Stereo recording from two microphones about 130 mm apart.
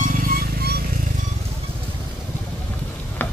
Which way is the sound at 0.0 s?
90° right.